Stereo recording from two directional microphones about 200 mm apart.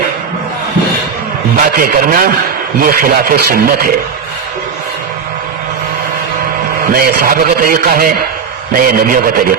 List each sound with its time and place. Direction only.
1.6 s a man's voice: 45° right (ahead or behind)
6.9 s a man's voice: 45° right (ahead or behind)